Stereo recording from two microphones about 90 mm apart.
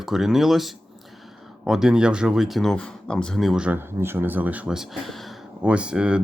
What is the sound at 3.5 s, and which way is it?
Speech, 10° right (ahead or behind).